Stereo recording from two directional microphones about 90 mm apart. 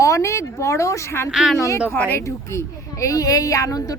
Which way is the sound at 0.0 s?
35° left (ahead or behind).